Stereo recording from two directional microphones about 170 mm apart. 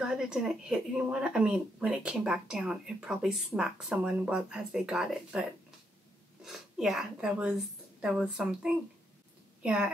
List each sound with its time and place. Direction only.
0.0 s a woman's voice: 5° right (ahead or behind)